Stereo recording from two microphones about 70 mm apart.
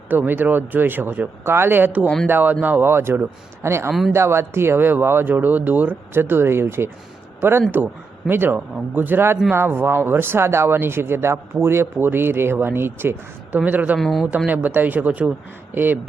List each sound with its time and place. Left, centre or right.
0.1 s speech: right
14.0 s speech: centre
14.3 s speech: right